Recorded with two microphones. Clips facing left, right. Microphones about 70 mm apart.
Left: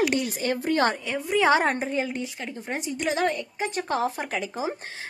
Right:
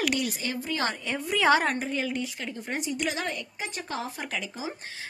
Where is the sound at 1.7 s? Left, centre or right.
Left.